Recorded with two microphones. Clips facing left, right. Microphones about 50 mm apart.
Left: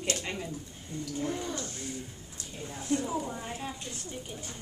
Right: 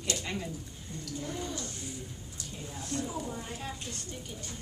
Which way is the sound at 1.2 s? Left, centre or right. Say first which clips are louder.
Left 3 dB; left.